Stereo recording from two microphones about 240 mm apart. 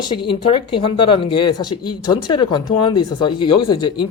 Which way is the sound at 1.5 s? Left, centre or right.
Left.